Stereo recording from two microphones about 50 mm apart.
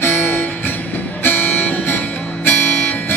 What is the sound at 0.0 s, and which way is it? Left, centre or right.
Music, left.